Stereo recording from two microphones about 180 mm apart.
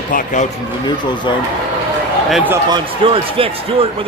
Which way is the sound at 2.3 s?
5° right (ahead or behind).